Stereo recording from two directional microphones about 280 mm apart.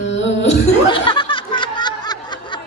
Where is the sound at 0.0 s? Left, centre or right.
Left.